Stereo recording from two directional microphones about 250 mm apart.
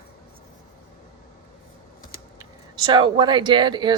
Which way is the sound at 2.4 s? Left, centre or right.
Centre.